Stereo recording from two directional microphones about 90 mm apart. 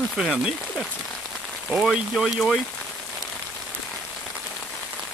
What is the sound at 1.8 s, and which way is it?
Speech, 5° right (ahead or behind).